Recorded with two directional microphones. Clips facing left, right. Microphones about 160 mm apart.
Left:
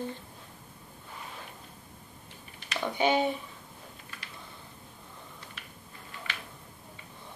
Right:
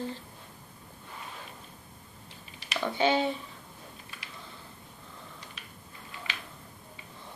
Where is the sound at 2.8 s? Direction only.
15° left (ahead or behind).